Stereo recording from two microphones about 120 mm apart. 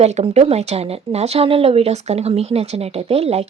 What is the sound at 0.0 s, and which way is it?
Speech, 65° right (ahead or behind).